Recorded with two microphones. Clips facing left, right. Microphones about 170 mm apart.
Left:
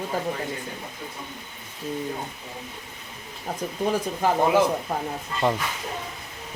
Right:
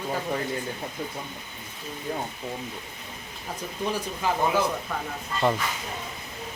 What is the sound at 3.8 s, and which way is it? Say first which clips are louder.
Speech: left 4 dB; 45° left (ahead or behind).